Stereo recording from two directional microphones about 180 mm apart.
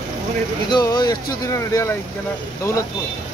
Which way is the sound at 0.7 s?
20° left (ahead or behind).